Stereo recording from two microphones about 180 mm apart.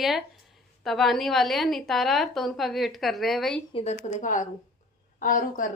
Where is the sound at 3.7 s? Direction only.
40° left (ahead or behind).